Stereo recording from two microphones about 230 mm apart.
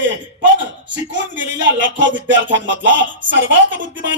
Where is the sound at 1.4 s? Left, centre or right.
Right.